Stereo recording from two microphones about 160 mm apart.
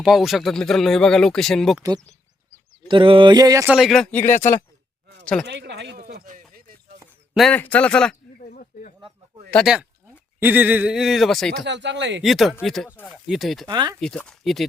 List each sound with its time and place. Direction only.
0.0 s speech: centre (ahead or behind)
2.9 s a sound: 30° right (ahead or behind)
3.7 s speech: centre (ahead or behind)
4.1 s speech: 15° left (ahead or behind)
5.5 s speech: 90° right
6.2 s a sound: 60° right (ahead or behind)
7.3 s speech: 5° left (ahead or behind)
8.4 s a sound: 60° left (ahead or behind)
9.5 s speech: 5° left (ahead or behind)
10.4 s speech: 10° right (ahead or behind)
11.6 s speech: 90° right
12.2 s speech: centre (ahead or behind)
13.7 s a sound: 25° right (ahead or behind)
14.0 s speech: 5° left (ahead or behind)